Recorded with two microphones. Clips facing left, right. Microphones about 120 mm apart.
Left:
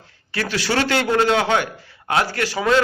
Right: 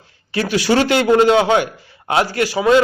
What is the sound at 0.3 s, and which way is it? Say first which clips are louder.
A man's voice: right 6 dB; 15° right (ahead or behind).